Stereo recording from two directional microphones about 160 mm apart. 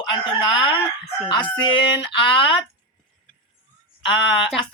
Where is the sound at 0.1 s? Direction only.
30° left (ahead or behind).